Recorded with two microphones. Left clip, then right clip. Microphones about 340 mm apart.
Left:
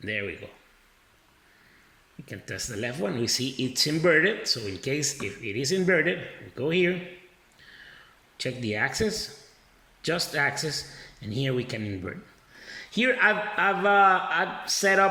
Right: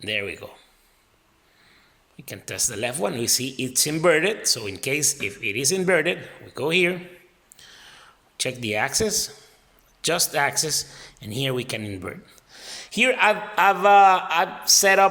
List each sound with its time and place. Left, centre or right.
2.2 s speech: centre
7.5 s a sound: centre
8.4 s a man's voice: centre